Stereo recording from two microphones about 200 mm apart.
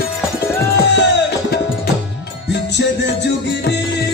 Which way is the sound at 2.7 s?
60° left (ahead or behind).